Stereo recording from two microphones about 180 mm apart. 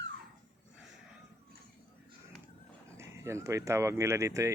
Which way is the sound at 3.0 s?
15° right (ahead or behind).